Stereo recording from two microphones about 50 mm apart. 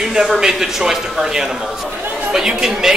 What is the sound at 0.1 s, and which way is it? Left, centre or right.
Speech, centre.